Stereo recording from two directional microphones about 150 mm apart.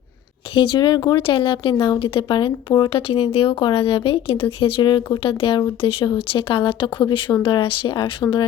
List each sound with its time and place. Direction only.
0.5 s speech: 35° left (ahead or behind)